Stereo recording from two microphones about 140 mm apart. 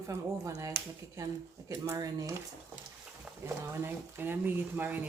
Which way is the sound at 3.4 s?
15° right (ahead or behind).